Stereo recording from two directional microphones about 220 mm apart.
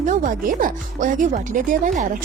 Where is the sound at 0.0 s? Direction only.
35° right (ahead or behind).